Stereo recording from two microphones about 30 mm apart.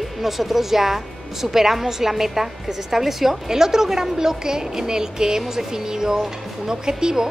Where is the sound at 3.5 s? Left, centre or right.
Centre.